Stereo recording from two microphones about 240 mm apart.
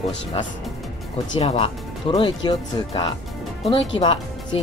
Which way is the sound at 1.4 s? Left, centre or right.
Left.